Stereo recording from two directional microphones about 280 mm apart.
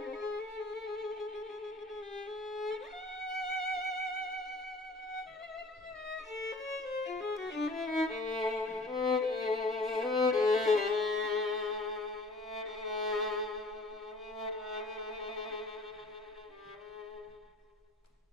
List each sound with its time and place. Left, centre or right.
0.0 s music: centre
0.7 s violin: centre
3.3 s music: centre
7.4 s music: left
7.7 s music: centre
14.3 s violin: centre